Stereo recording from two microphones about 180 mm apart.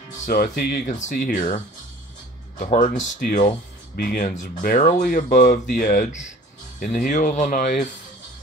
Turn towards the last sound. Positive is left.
turn(degrees=45)  # may be behind; listen again after turning